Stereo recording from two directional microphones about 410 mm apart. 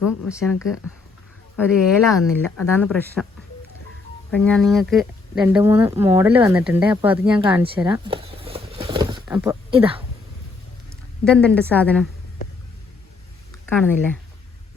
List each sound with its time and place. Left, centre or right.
0.3 s speech: centre
4.3 s speech: centre
7.8 s a sound: centre
10.8 s a sound: centre
11.7 s speech: centre
13.7 s speech: centre